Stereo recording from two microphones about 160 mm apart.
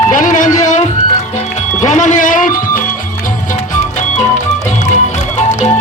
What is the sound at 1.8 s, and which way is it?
Music, 50° left (ahead or behind).